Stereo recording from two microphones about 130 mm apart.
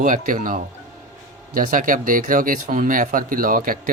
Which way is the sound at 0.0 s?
90° right.